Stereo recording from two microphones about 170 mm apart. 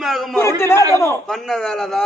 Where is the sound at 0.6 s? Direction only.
15° left (ahead or behind).